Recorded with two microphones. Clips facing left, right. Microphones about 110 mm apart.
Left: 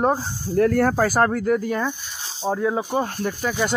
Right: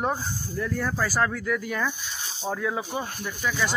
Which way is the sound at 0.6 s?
70° left (ahead or behind).